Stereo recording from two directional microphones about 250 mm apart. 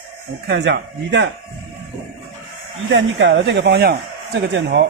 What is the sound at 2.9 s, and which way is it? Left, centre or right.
Speech, right.